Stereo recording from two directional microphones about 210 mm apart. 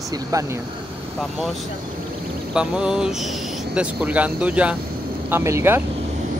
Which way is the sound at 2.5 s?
5° right (ahead or behind).